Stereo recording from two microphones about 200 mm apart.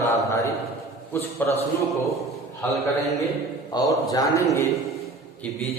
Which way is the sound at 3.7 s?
15° left (ahead or behind).